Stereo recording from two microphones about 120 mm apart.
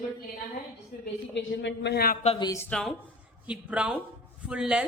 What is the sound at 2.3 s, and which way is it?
Speech, 65° left (ahead or behind).